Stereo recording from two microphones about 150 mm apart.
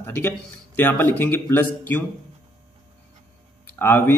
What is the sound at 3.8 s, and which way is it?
Speech, 15° left (ahead or behind).